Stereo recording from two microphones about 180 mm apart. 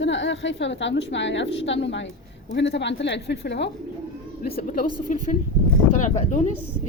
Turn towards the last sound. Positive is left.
turn(degrees=40)  # may be behind; listen again after turning